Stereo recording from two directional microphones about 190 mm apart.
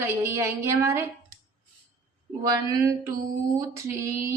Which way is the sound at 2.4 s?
15° right (ahead or behind).